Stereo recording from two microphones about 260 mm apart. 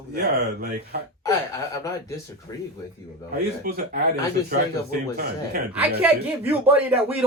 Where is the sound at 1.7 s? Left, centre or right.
Centre.